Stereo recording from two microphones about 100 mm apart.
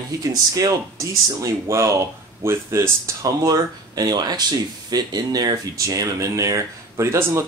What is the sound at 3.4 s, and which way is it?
Speech, 40° right (ahead or behind).